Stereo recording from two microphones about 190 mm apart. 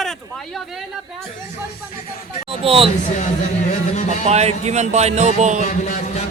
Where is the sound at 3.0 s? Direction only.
40° left (ahead or behind).